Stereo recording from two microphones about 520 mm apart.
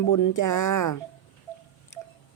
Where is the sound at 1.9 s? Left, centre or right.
Left.